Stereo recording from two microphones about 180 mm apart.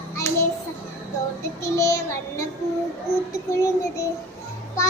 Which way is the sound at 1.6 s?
15° left (ahead or behind).